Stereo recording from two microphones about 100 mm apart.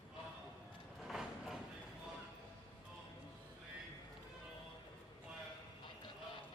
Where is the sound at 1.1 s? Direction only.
Centre (ahead or behind).